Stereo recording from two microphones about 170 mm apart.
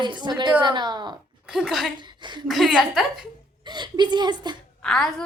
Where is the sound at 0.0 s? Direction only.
25° right (ahead or behind).